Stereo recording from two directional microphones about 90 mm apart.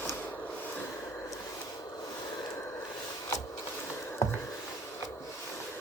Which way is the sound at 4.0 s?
30° left (ahead or behind).